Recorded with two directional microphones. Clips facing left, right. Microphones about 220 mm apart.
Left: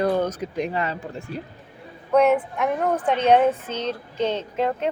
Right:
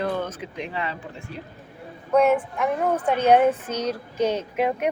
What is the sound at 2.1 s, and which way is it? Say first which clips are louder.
A woman's voice: left 1 dB; centre (ahead or behind).